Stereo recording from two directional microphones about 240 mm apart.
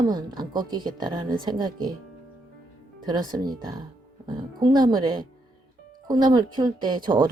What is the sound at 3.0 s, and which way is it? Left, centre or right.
A woman's voice, centre.